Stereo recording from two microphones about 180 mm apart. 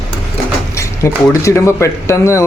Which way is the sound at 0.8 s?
15° left (ahead or behind).